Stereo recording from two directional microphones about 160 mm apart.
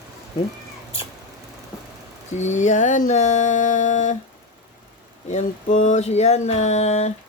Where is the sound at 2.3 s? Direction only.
45° left (ahead or behind).